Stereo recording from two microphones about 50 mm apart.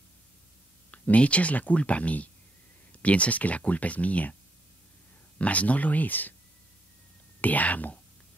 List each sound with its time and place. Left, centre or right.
0.9 s speech: left
5.4 s speech: left
7.4 s speech: left